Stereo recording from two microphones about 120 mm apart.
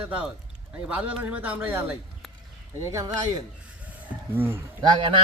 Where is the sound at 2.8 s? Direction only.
25° right (ahead or behind).